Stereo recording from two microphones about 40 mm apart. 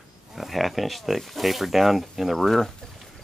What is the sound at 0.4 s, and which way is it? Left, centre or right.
Speech, centre.